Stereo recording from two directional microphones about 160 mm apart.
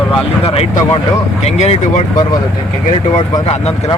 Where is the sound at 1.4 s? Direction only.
40° left (ahead or behind).